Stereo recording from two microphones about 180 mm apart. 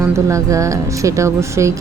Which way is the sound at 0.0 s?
15° right (ahead or behind).